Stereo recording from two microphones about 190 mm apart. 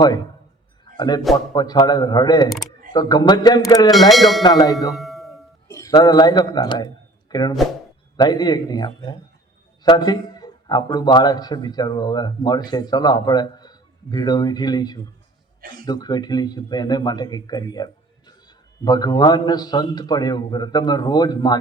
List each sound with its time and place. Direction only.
0.9 s a man's voice: 25° left (ahead or behind)
2.5 s speech: centre (ahead or behind)
2.9 s speech: 20° left (ahead or behind)
4.1 s speech: centre (ahead or behind)
4.4 s speech: 20° left (ahead or behind)
4.9 s a sound: centre (ahead or behind)
5.6 s a man's voice: 15° left (ahead or behind)
15.6 s speech: 50° right (ahead or behind)
15.9 s speech: 20° left (ahead or behind)